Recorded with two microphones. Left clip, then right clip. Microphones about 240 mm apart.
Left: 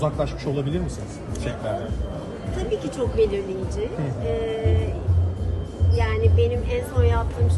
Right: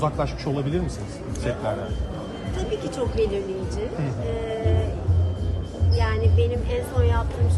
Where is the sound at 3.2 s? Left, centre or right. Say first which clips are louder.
Left 4 dB; centre.